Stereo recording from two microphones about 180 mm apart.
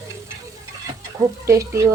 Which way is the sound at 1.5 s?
15° right (ahead or behind).